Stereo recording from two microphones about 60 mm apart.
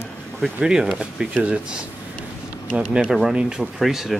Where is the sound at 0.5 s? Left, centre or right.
Centre.